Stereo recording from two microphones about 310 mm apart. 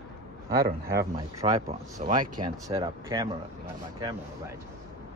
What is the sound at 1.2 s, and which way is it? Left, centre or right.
Speech, centre.